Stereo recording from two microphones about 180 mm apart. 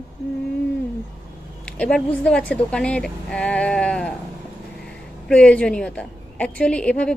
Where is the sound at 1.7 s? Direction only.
5° left (ahead or behind).